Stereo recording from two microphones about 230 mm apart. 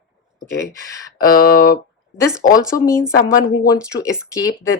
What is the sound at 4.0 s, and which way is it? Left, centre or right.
Speech, centre.